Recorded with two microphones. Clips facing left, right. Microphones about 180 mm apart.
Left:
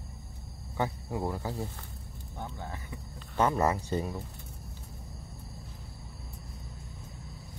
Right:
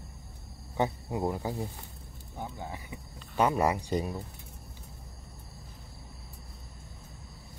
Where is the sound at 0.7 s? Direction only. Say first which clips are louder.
Right 2 dB; 20° right (ahead or behind).